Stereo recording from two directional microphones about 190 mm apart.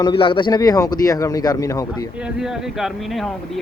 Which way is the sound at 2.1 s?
5° right (ahead or behind).